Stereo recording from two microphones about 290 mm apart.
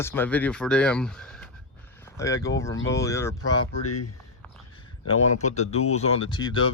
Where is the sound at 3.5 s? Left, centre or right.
Left.